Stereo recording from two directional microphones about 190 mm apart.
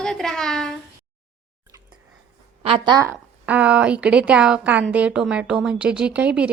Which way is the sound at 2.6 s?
30° right (ahead or behind).